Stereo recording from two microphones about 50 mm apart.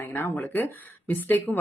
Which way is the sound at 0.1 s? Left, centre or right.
Left.